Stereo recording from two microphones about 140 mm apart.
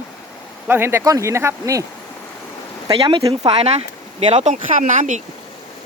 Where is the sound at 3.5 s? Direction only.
45° right (ahead or behind).